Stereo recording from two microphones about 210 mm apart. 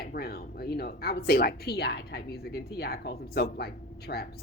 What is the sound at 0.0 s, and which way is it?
Speech, 45° left (ahead or behind).